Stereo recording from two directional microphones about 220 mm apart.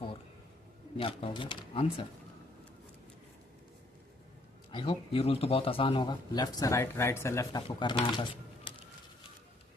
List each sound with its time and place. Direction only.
0.9 s speech: 25° left (ahead or behind)
4.7 s speech: 25° left (ahead or behind)